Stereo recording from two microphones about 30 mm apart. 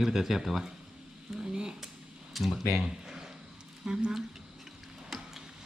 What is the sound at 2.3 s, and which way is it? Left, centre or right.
Speech, centre.